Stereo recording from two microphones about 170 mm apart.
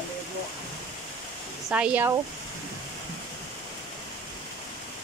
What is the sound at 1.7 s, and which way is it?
Speech, 10° right (ahead or behind).